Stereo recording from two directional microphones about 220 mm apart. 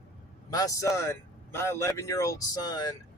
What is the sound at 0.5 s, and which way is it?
A man's voice, 15° left (ahead or behind).